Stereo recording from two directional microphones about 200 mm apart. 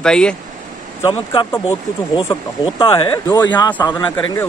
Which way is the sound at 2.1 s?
25° left (ahead or behind).